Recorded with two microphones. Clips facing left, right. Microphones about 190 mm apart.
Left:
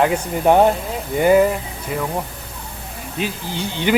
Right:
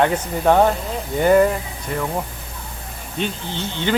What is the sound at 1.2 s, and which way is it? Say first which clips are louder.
Speech: left 1 dB; 5° left (ahead or behind).